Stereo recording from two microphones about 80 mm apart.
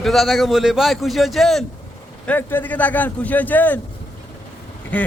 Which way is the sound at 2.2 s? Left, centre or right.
Left.